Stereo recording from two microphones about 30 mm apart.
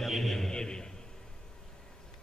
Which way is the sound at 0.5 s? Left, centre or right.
Left.